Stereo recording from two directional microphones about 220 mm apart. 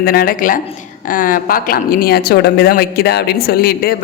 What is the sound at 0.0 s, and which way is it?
A woman's voice, 40° left (ahead or behind).